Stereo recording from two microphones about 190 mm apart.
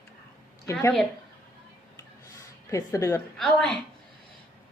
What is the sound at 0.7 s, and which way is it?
Speech, 15° left (ahead or behind).